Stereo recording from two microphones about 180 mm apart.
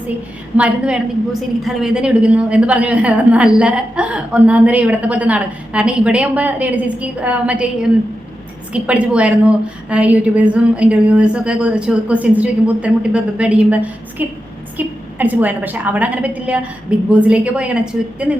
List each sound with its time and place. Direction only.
0.5 s a woman's voice: 5° right (ahead or behind)